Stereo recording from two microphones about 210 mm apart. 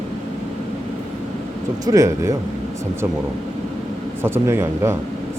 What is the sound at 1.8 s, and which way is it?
Speech, 15° right (ahead or behind).